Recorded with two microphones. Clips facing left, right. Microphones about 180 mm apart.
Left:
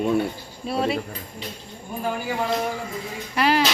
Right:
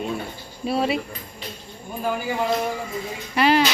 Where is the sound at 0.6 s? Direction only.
5° right (ahead or behind).